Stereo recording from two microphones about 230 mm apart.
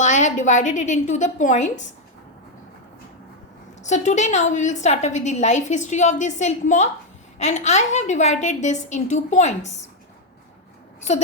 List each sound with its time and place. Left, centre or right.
0.0 s a woman's voice: left
3.8 s a woman's voice: left